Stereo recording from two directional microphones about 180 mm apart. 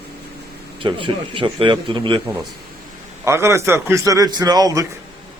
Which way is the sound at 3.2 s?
15° right (ahead or behind).